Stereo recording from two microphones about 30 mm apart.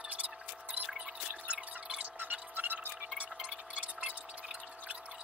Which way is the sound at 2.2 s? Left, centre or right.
Right.